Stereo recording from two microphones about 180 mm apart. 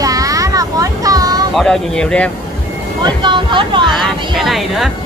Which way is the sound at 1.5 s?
5° left (ahead or behind).